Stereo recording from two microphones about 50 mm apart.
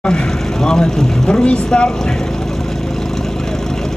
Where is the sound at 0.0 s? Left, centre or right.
Centre.